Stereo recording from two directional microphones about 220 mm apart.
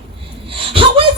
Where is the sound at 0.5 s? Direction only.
25° right (ahead or behind).